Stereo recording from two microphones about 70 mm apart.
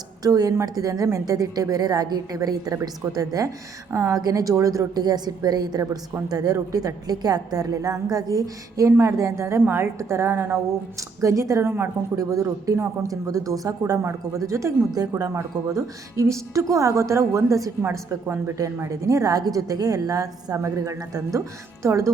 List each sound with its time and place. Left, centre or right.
0.2 s a woman's voice: right
1.2 s a woman's voice: right
3.9 s a woman's voice: right
4.2 s a woman's voice: right
11.2 s a woman's voice: right
12.1 s a woman's voice: right
14.0 s a woman's voice: right
14.8 s speech: right
15.1 s a woman's voice: right
18.9 s a woman's voice: right